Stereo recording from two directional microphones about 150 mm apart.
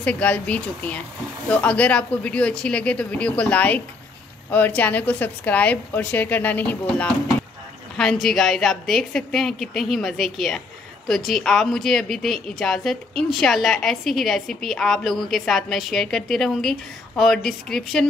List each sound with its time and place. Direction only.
0.0 s a woman's voice: 10° left (ahead or behind)